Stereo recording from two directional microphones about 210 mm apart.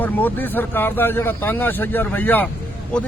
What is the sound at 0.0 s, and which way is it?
Speech, 10° left (ahead or behind).